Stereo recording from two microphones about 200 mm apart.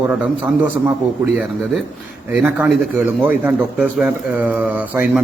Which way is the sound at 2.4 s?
5° right (ahead or behind).